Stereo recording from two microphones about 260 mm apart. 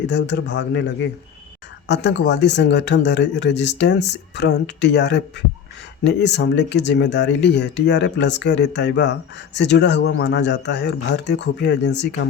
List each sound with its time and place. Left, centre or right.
0.1 s speech: left
1.9 s speech: left